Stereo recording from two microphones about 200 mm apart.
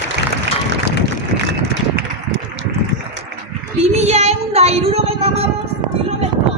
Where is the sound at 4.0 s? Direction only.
35° right (ahead or behind).